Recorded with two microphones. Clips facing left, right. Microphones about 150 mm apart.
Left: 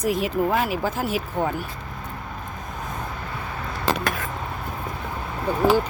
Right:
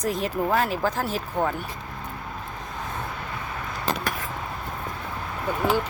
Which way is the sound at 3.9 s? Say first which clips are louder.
Left 4 dB; 90° left.